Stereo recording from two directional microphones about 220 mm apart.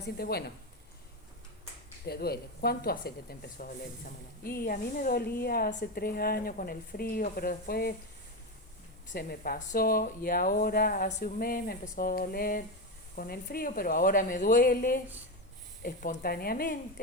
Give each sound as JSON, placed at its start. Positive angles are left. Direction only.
{"t": 0.0, "sound": "speech", "side_deg": 45}
{"t": 2.0, "sound": "speech", "side_deg": 45}
{"t": 9.1, "sound": "speech", "side_deg": 40}